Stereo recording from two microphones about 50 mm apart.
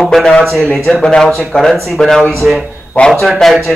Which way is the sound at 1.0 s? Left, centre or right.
Centre.